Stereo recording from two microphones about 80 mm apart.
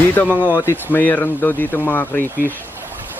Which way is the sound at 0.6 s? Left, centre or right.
Left.